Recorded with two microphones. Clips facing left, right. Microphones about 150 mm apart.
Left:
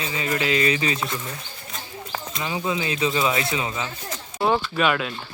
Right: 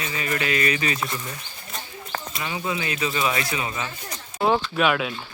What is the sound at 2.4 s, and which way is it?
Speech, 20° left (ahead or behind).